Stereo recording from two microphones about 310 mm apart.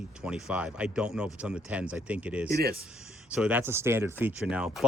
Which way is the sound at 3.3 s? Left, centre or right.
Centre.